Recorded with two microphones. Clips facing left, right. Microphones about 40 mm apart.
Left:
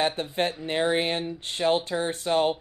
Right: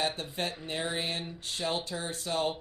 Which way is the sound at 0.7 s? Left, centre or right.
Left.